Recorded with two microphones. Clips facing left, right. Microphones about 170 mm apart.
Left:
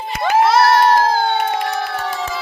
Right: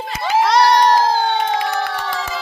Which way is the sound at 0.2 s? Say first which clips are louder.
Left 2 dB; 55° left (ahead or behind).